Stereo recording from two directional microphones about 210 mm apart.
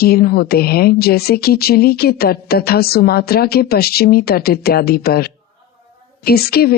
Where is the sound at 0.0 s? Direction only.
45° left (ahead or behind).